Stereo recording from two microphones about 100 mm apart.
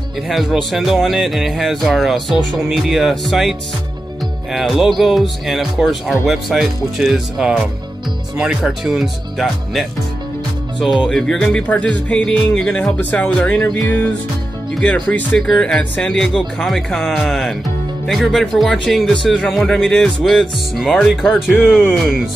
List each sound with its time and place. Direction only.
0.3 s speech: centre (ahead or behind); by 13.6 s 15° left (ahead or behind)
15.3 s speech: 5° left (ahead or behind)
21.6 s speech: 10° left (ahead or behind)